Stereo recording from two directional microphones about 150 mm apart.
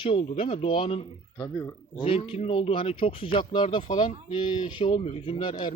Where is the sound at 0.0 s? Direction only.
35° left (ahead or behind).